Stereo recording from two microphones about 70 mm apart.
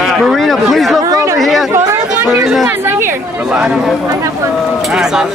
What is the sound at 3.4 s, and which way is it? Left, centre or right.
Speech, centre.